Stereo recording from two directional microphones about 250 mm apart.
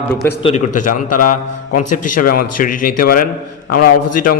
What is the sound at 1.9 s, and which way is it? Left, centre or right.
Speech, left.